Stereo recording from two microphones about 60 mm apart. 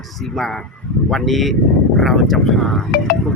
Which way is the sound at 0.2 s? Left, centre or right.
Centre.